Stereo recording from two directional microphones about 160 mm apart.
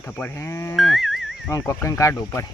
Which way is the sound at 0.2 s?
15° left (ahead or behind).